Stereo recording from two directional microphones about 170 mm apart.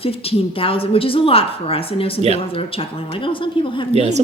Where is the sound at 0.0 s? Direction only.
35° left (ahead or behind).